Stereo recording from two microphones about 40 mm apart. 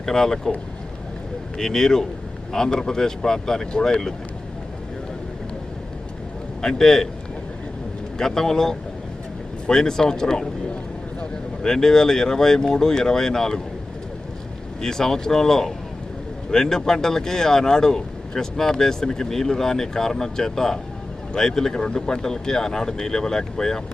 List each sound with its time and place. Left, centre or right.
0.0 s speech: centre
1.5 s speech: centre
6.6 s speech: centre
8.2 s speech: centre
14.8 s speech: centre